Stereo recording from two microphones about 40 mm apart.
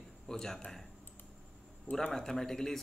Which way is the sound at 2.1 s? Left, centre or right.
Centre.